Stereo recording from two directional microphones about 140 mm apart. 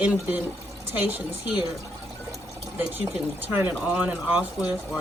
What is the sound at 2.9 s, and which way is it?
Speech, 15° right (ahead or behind).